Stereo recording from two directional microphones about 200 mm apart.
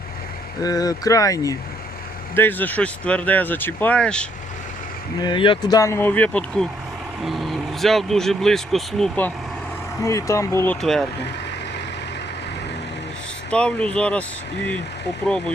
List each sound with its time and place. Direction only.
0.6 s speech: 20° left (ahead or behind)
5.2 s speech: 25° left (ahead or behind); by 9.3 s 5° left (ahead or behind)
10.0 s speech: 15° left (ahead or behind)
10.8 s speech: centre (ahead or behind)
13.5 s speech: 5° left (ahead or behind)